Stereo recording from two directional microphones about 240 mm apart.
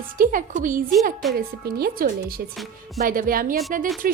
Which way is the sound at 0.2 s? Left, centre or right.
Right.